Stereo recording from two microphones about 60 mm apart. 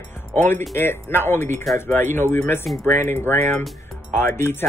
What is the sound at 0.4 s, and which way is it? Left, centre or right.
Speech, left.